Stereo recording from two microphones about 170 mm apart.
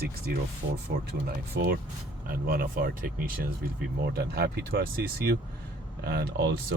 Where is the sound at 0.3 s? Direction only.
60° right (ahead or behind).